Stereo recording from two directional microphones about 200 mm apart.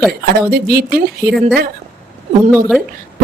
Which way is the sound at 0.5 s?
50° right (ahead or behind).